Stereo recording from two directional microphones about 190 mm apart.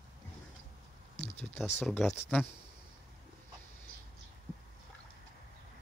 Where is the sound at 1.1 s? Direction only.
35° left (ahead or behind).